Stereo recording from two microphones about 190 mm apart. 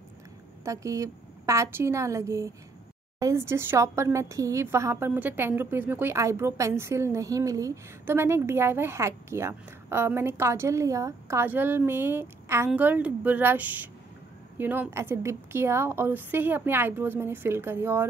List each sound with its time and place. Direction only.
0.7 s a woman's voice: 15° right (ahead or behind)